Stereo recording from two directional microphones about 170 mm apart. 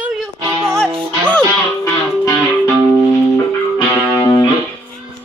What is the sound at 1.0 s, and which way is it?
Music, 5° left (ahead or behind).